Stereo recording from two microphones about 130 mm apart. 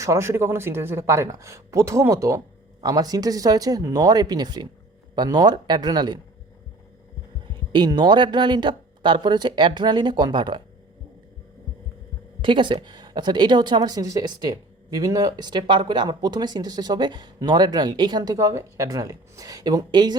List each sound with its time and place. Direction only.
0.0 s speech: 20° right (ahead or behind)
7.7 s speech: 35° right (ahead or behind)
12.4 s speech: 40° right (ahead or behind)